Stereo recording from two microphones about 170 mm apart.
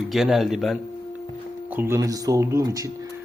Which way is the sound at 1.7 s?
15° right (ahead or behind).